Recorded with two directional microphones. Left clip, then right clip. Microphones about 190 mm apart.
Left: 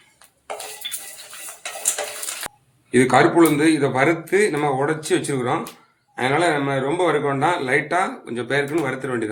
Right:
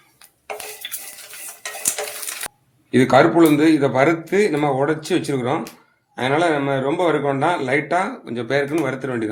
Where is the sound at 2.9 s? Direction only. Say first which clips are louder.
Right 2 dB; 40° right (ahead or behind).